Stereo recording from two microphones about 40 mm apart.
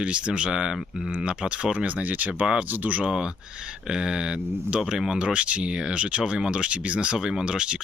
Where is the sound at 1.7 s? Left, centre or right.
Right.